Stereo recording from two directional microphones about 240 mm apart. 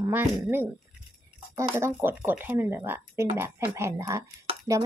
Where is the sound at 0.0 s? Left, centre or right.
Centre.